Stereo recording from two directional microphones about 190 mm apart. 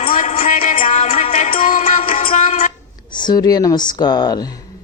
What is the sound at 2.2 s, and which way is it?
Music, 35° left (ahead or behind).